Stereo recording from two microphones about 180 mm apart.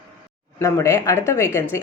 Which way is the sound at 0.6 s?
15° left (ahead or behind).